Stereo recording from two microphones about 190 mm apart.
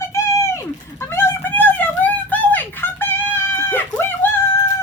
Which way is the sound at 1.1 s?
10° left (ahead or behind).